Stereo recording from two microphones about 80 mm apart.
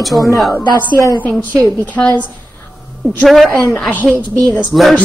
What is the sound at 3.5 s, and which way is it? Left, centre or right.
Speech, centre.